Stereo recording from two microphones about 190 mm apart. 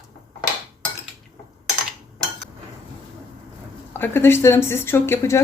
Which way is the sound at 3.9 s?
10° left (ahead or behind).